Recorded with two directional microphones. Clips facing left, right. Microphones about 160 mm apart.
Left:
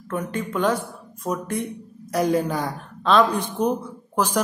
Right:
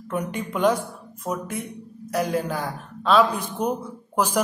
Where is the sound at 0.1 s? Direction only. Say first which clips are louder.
Left 1 dB; 15° right (ahead or behind).